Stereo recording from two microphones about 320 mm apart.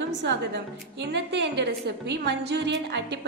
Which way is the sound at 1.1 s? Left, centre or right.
Right.